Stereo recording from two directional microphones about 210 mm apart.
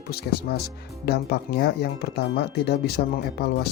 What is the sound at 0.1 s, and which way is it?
Speech, 50° left (ahead or behind).